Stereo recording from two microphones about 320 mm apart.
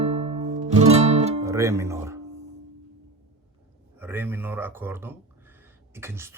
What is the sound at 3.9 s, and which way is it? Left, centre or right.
Speech, centre.